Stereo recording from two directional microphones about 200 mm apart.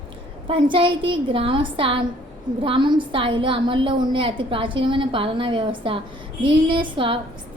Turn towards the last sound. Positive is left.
turn(degrees=-25)  # may be behind; listen again after turning